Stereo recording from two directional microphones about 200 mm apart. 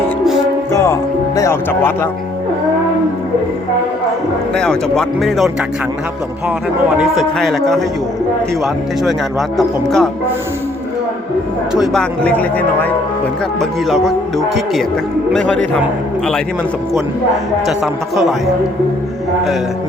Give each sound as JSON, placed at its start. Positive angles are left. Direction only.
{"t": 0.7, "sound": "music", "side_deg": 15}
{"t": 1.4, "sound": "speech", "side_deg": 15}
{"t": 4.5, "sound": "speech", "side_deg": 5}
{"t": 6.9, "sound": "speech", "side_deg": 0}
{"t": 9.6, "sound": "speech", "side_deg": 0}
{"t": 11.7, "sound": "speech", "side_deg": 0}
{"t": 17.7, "sound": "speech", "side_deg": 0}